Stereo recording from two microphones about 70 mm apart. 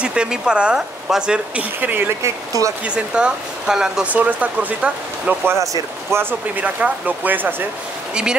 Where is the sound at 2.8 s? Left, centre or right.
Centre.